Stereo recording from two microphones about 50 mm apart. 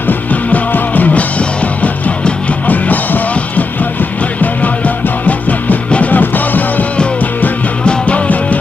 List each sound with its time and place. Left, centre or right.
0.0 s music: left
7.8 s music: left